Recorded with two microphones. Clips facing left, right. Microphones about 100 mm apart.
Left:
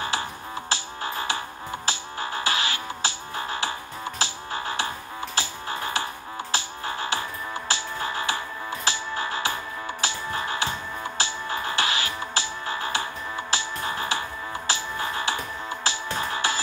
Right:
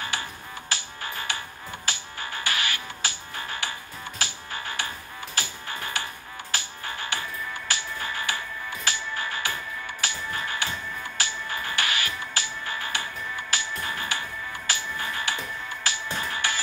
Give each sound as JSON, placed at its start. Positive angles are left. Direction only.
{"t": 0.7, "sound": "music", "side_deg": 30}